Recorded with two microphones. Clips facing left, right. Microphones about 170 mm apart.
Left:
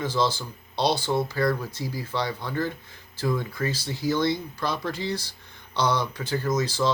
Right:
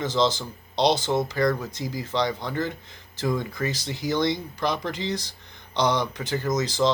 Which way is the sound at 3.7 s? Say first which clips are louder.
Left 3 dB; 15° right (ahead or behind).